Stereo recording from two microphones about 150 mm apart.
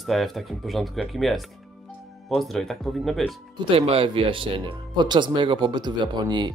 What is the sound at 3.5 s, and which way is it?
Speech, 35° right (ahead or behind).